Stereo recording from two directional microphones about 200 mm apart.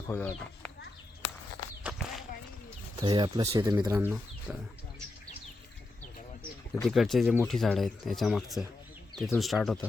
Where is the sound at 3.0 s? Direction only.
20° right (ahead or behind).